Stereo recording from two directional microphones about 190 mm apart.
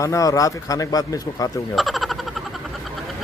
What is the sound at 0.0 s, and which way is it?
Speech, 15° left (ahead or behind).